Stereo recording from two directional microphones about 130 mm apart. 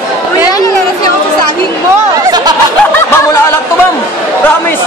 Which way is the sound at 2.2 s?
30° right (ahead or behind).